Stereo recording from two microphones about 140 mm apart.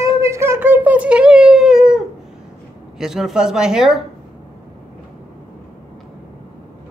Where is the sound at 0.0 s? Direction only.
20° right (ahead or behind); by 2.0 s 5° right (ahead or behind).